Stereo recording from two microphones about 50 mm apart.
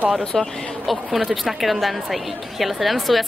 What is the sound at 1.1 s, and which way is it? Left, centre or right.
A woman's voice, centre.